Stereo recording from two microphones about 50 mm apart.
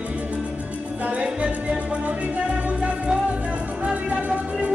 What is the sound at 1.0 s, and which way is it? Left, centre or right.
Music, right.